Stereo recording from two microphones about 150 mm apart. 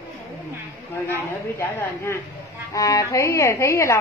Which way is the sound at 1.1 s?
15° left (ahead or behind).